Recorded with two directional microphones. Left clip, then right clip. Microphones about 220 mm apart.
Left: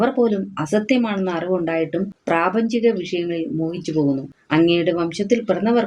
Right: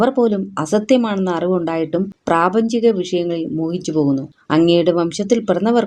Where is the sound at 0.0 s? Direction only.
45° right (ahead or behind).